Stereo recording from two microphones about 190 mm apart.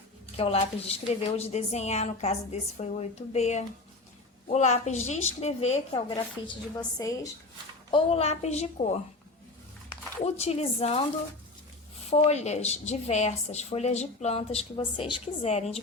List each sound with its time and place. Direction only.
0.3 s a woman's voice: 30° left (ahead or behind)
7.9 s a woman's voice: 30° left (ahead or behind)
10.2 s a woman's voice: 35° left (ahead or behind)
12.1 s a woman's voice: 35° left (ahead or behind)